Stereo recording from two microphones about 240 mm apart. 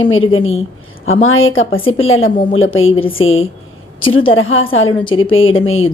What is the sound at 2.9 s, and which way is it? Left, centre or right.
Speech, left.